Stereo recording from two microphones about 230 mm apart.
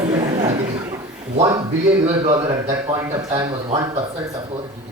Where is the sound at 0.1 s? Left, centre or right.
Right.